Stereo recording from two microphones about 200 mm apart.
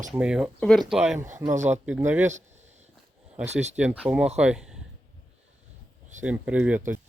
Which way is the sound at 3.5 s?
35° right (ahead or behind).